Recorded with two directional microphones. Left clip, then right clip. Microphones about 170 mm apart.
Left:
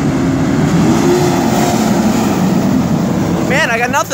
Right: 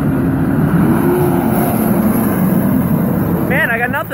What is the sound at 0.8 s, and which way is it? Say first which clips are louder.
Vehicle: left 2 dB; 10° left (ahead or behind).